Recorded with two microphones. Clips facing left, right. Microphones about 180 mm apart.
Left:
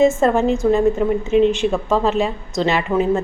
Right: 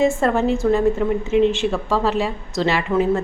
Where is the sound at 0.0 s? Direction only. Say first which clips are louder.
Left 3 dB; 20° left (ahead or behind).